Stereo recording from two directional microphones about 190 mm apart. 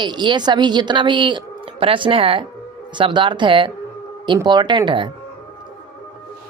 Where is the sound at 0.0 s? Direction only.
25° right (ahead or behind).